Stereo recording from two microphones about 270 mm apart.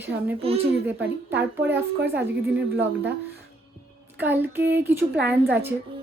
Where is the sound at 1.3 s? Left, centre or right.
Centre.